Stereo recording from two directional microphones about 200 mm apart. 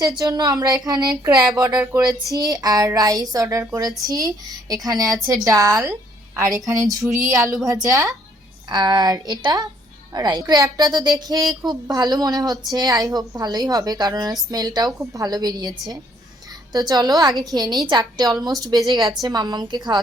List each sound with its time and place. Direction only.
0.0 s a woman's voice: 20° right (ahead or behind)